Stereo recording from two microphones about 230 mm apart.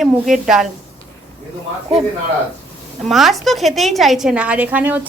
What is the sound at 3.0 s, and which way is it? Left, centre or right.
A woman's voice, centre.